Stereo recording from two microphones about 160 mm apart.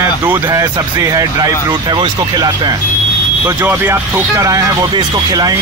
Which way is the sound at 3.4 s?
15° right (ahead or behind).